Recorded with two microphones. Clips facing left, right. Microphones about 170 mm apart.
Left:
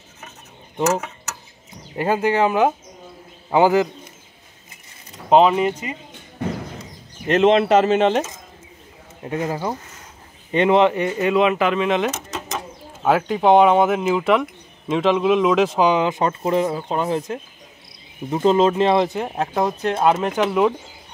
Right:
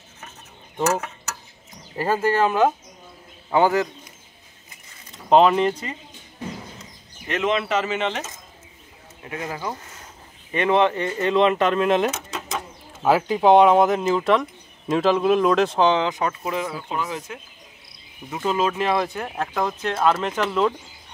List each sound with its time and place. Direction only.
2.0 s a man's voice: 15° left (ahead or behind)
5.3 s speech: 5° left (ahead or behind)
7.2 s speech: 40° left (ahead or behind)
9.2 s speech: 30° left (ahead or behind); by 16.1 s 10° left (ahead or behind)
16.1 s speech: 30° left (ahead or behind); by 20.7 s 10° left (ahead or behind)